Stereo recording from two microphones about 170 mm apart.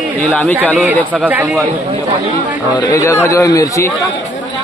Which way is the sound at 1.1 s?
10° right (ahead or behind).